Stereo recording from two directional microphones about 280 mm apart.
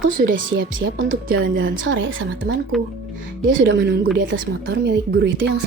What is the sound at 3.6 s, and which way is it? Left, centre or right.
Speech, right.